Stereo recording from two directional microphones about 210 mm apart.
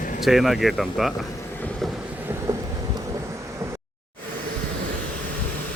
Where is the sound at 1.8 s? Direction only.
10° right (ahead or behind).